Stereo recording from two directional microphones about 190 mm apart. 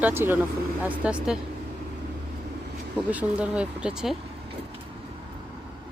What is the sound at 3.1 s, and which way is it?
Speech, 5° right (ahead or behind).